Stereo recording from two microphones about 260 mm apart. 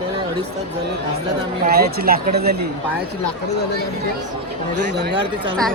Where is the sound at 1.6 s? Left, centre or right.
Right.